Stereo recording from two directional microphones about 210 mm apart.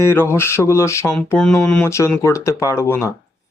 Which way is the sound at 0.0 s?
10° left (ahead or behind).